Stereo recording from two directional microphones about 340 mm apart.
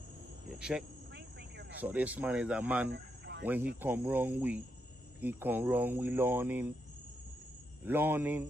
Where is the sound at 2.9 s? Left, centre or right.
Right.